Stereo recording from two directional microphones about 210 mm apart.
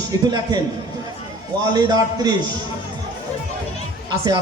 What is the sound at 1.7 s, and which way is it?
Speech, 20° right (ahead or behind).